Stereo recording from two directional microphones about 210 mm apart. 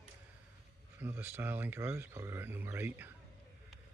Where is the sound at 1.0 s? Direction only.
10° right (ahead or behind).